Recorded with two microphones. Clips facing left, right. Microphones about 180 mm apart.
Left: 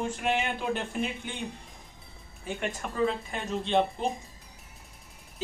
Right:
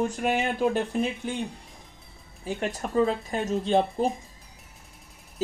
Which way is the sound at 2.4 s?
35° right (ahead or behind).